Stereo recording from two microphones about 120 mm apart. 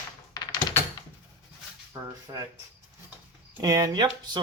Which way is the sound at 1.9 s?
30° right (ahead or behind).